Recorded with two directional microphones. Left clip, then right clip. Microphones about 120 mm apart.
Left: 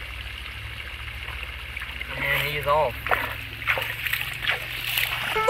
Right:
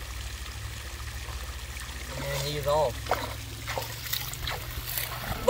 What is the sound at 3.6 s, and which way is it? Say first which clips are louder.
Splash: left 10 dB; 30° right (ahead or behind).